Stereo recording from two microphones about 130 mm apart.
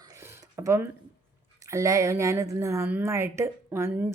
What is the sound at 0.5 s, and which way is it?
Speech, 20° right (ahead or behind).